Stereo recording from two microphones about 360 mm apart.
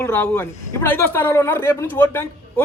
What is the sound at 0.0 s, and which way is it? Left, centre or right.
A man's voice, centre.